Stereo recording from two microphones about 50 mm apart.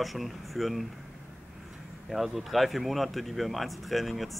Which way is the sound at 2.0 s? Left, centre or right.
Centre.